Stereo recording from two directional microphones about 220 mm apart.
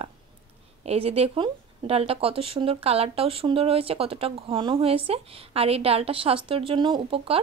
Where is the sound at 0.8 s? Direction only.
25° right (ahead or behind).